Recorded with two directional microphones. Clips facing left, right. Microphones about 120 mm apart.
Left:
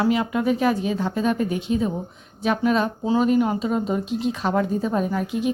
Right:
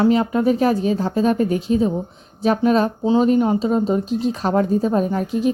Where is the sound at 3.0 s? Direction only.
25° right (ahead or behind).